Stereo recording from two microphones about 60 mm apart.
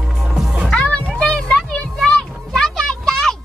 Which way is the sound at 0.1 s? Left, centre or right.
Centre.